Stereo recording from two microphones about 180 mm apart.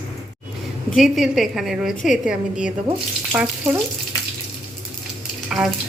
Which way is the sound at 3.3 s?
5° right (ahead or behind).